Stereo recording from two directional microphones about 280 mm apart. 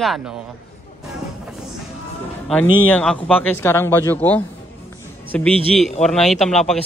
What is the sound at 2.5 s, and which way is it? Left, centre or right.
A man's voice, centre.